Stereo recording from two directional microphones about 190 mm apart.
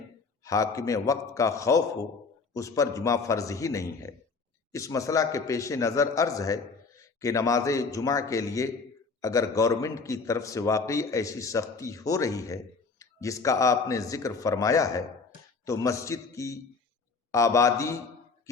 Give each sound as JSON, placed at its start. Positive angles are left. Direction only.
{"t": 0.4, "sound": "a man's voice", "side_deg": 15}